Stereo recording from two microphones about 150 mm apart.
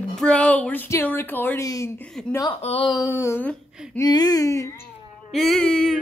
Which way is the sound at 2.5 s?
40° left (ahead or behind).